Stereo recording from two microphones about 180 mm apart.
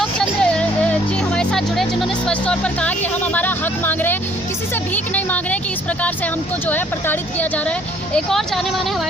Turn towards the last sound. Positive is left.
turn(degrees=10)  # may be behind; listen again after turning